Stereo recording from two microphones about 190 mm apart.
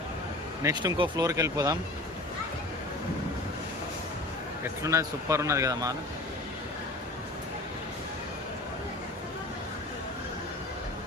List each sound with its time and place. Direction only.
0.6 s speech: 20° right (ahead or behind)
4.8 s speech: 15° right (ahead or behind)